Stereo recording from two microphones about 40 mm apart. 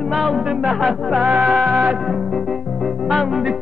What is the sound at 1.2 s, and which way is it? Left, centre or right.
Music, right.